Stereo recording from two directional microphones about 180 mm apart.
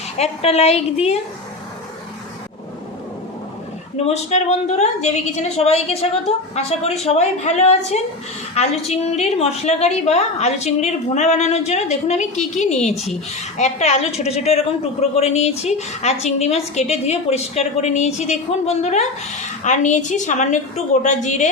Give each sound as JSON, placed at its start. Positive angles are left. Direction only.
{"t": 0.2, "sound": "a woman's voice", "side_deg": 35}
{"t": 3.9, "sound": "a woman's voice", "side_deg": 35}
{"t": 12.9, "sound": "speech", "side_deg": 0}
{"t": 13.6, "sound": "a woman's voice", "side_deg": 40}